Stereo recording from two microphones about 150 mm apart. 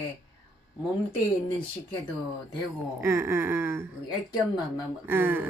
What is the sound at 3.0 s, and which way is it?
Speech, 15° right (ahead or behind).